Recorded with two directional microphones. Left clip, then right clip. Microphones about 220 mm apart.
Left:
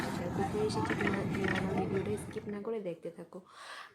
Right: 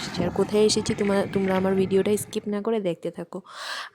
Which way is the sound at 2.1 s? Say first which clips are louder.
Right 13 dB; 50° right (ahead or behind).